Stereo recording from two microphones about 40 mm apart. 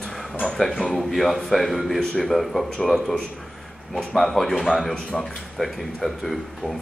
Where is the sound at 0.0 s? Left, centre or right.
Centre.